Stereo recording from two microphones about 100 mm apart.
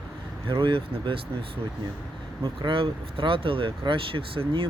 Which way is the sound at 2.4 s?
55° right (ahead or behind).